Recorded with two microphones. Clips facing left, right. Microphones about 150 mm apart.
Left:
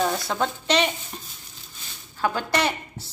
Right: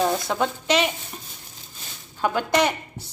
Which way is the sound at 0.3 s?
10° right (ahead or behind).